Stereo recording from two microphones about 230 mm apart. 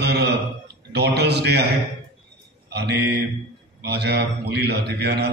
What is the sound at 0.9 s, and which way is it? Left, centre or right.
Mantra, right.